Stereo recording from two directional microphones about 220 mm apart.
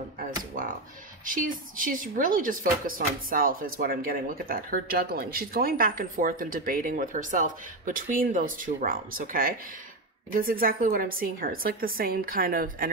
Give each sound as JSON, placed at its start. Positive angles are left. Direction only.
{"t": 1.2, "sound": "speech", "side_deg": -40}